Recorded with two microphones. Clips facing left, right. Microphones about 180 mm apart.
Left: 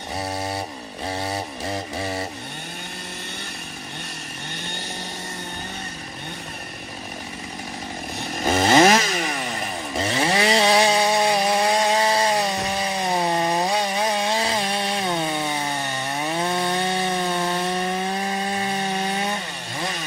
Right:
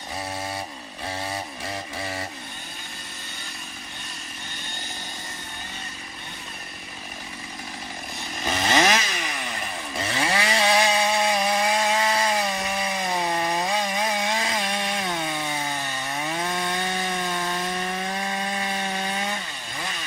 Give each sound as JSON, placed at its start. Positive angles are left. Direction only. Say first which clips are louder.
{"t": 0.3, "sound": "chainsaw", "louder": "left 4 dB", "side_deg": 30}
{"t": 1.0, "sound": "a sound", "louder": "left 4 dB", "side_deg": 30}
{"t": 8.4, "sound": "chainsaw", "louder": "left 6 dB", "side_deg": 45}
{"t": 10.0, "sound": "chainsaw", "louder": "left 4 dB", "side_deg": 30}
{"t": 16.2, "sound": "wood", "louder": "left 5 dB", "side_deg": 30}